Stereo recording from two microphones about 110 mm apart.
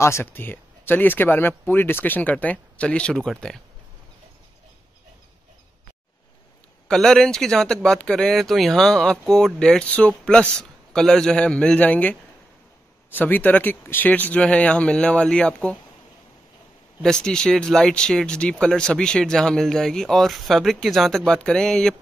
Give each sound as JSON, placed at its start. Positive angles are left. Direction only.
{"t": 0.0, "sound": "speech", "side_deg": 20}
{"t": 6.9, "sound": "speech", "side_deg": 5}
{"t": 17.0, "sound": "speech", "side_deg": 5}